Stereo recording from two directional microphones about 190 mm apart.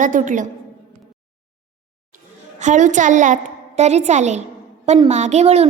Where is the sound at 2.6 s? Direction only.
40° right (ahead or behind).